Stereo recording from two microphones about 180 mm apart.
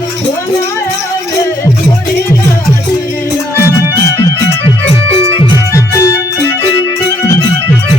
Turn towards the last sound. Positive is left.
turn(degrees=15)  # may be behind; listen again after turning